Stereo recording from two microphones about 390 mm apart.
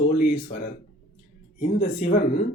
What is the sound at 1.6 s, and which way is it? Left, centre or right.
Speech, centre.